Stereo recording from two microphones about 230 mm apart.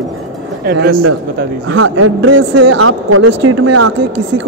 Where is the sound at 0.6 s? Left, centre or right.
Right.